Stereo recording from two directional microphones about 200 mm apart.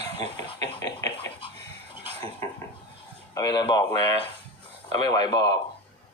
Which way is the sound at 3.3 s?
20° left (ahead or behind).